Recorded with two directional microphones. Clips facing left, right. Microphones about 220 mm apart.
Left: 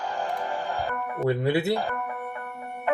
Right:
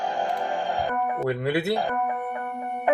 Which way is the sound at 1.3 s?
25° left (ahead or behind).